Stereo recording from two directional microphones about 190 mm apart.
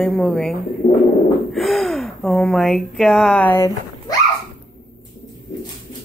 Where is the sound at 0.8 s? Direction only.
40° left (ahead or behind).